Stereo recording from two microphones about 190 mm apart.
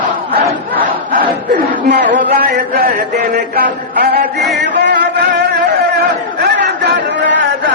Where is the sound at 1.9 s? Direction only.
65° right (ahead or behind).